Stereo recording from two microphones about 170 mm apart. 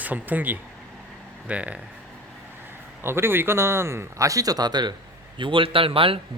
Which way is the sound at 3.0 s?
15° right (ahead or behind).